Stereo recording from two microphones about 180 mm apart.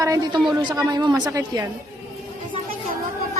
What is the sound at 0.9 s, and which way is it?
Speech, 25° right (ahead or behind).